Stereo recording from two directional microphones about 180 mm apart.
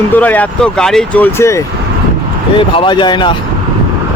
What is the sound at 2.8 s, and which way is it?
Speech, 25° left (ahead or behind).